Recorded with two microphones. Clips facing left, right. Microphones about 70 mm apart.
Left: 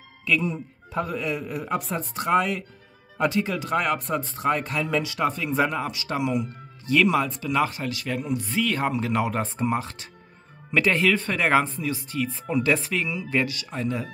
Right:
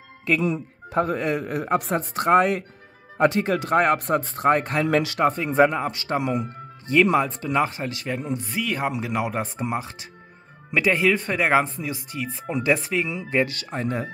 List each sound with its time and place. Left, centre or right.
0.3 s speech: right
4.8 s speech: right
5.2 s speech: right
8.5 s speech: centre
13.5 s speech: right